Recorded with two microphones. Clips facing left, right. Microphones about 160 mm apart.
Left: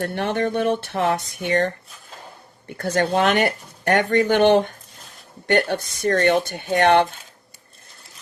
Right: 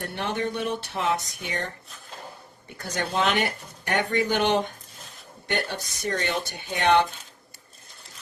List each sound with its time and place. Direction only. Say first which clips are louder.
0.0 s speech: left 6 dB; 55° left (ahead or behind)
2.7 s speech: left 7 dB; 55° left (ahead or behind)